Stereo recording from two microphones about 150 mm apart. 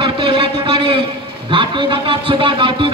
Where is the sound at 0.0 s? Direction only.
35° right (ahead or behind).